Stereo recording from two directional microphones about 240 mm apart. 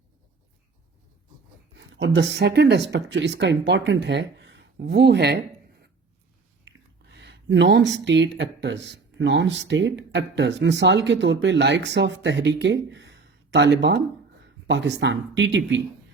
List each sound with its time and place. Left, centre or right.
1.7 s speech: right
6.7 s speech: right